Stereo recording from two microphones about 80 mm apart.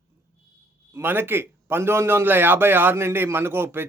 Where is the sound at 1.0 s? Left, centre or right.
Right.